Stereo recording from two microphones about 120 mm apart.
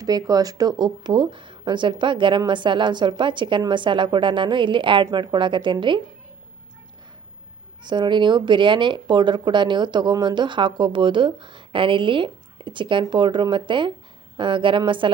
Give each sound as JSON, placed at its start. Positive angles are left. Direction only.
{"t": 0.0, "sound": "speech", "side_deg": -30}
{"t": 7.9, "sound": "a woman's voice", "side_deg": -40}